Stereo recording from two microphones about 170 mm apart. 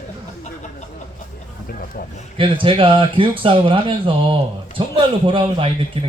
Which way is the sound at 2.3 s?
30° right (ahead or behind).